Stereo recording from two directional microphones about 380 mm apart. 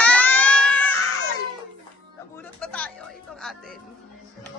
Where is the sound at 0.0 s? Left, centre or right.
Centre.